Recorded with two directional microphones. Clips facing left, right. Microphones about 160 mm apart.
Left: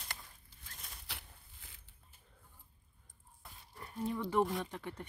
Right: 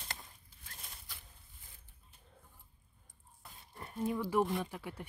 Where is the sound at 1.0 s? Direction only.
85° left.